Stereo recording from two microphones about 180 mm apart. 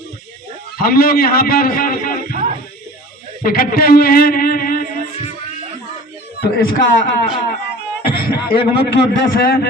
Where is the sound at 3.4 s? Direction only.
55° left (ahead or behind).